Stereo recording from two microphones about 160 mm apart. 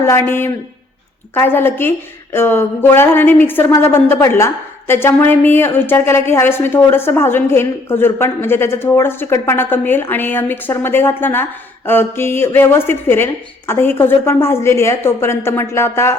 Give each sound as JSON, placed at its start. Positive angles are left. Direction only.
{"t": 0.0, "sound": "a woman's voice", "side_deg": 15}